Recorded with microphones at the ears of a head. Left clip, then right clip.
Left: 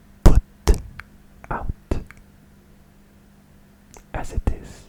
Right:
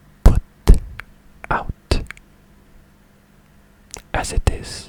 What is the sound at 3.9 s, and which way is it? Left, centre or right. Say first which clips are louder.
Whispering: right 9 dB; right.